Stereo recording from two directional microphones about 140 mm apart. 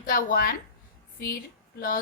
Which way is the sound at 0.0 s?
85° left.